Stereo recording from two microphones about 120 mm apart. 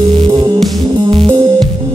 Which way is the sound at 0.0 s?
50° right (ahead or behind).